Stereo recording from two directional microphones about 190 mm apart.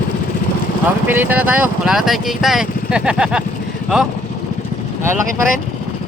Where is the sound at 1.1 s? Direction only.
10° right (ahead or behind).